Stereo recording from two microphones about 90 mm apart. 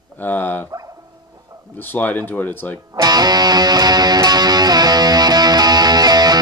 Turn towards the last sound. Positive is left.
turn(degrees=-50)  # may be behind; listen again after turning